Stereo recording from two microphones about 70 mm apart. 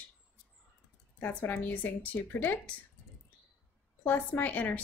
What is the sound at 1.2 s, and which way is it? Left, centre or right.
Speech, left.